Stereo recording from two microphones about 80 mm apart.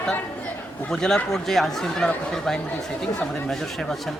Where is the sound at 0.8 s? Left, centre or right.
Centre.